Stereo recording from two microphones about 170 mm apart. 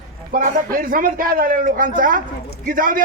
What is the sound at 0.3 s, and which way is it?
A man's voice, 50° right (ahead or behind).